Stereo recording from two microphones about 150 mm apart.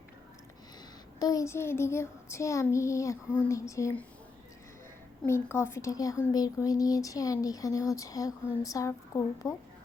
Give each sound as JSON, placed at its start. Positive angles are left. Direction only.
{"t": 1.2, "sound": "speech", "side_deg": 20}
{"t": 5.2, "sound": "speech", "side_deg": 15}